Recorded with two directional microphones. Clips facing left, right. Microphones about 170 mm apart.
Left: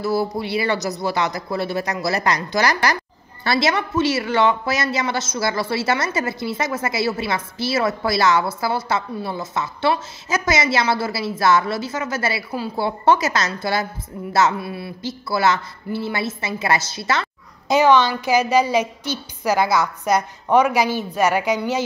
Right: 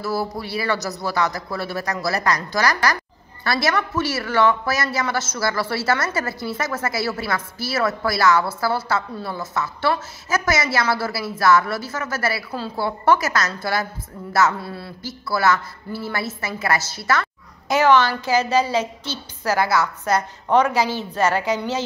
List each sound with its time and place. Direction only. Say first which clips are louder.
0.0 s a woman's voice: left 4 dB; 20° left (ahead or behind)